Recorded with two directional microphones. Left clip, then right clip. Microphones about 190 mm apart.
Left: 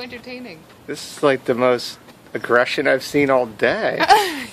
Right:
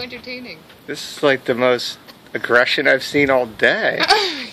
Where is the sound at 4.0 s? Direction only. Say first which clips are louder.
Left 2 dB; 45° left (ahead or behind).